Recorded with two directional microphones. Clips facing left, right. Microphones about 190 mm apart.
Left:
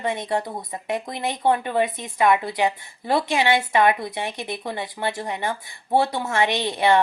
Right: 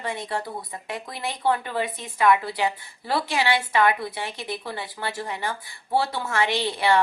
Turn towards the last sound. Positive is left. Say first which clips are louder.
# left 2 dB
turn(degrees=20)  # may be behind; listen again after turning